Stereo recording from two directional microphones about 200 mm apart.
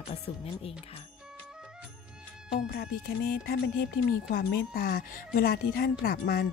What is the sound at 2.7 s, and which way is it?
A woman's voice, 50° left (ahead or behind).